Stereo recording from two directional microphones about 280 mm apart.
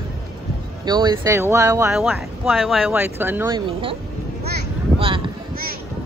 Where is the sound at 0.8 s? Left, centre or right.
Centre.